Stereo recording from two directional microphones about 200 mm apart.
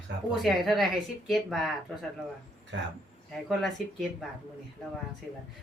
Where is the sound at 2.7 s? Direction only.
65° right (ahead or behind).